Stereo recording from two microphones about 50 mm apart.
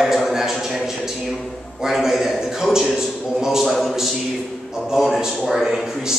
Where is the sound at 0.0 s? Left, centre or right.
Centre.